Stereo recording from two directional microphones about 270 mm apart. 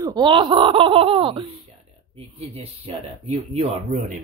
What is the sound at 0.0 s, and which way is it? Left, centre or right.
Speech, centre.